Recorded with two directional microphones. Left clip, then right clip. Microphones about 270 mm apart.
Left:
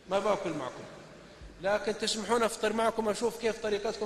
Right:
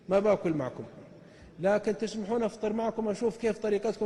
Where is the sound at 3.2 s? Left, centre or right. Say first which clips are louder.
Right 1 dB; right.